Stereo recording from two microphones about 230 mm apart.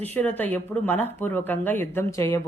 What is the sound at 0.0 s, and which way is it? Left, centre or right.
A woman's voice, centre.